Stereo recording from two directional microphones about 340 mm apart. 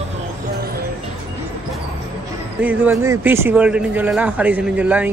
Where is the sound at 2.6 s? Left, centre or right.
Centre.